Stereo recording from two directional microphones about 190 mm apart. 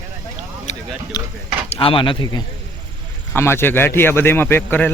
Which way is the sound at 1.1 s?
20° left (ahead or behind).